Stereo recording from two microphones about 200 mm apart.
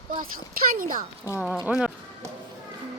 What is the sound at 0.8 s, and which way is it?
Speech, 45° right (ahead or behind).